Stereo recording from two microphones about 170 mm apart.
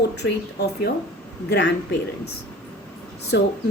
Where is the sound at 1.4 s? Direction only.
90° left.